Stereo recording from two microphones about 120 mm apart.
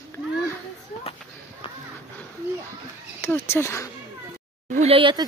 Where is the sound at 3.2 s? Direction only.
20° left (ahead or behind).